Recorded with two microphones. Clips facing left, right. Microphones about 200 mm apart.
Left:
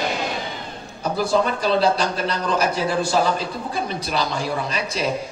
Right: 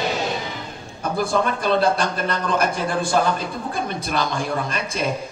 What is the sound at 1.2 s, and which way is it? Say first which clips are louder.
A man's voice: left 1 dB; 55° right (ahead or behind).